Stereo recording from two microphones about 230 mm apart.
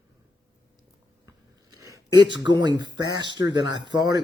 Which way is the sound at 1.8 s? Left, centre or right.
Centre.